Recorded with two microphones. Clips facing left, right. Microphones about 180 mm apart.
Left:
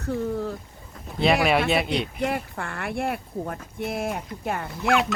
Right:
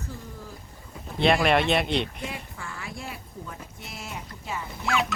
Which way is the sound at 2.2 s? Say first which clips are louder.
Left 9 dB; 60° left (ahead or behind).